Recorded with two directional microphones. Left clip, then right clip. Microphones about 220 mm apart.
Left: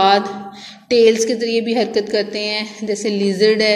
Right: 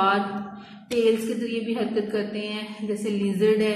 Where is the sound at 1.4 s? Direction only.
15° left (ahead or behind).